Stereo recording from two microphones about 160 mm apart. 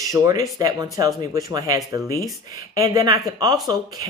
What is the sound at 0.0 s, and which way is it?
Speech, 20° right (ahead or behind).